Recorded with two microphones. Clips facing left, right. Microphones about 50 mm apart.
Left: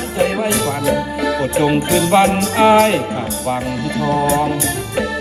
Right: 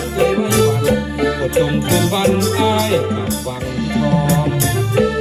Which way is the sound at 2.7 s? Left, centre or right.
Left.